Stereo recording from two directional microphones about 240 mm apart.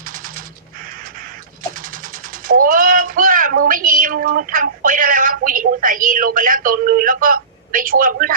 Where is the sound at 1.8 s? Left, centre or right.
Right.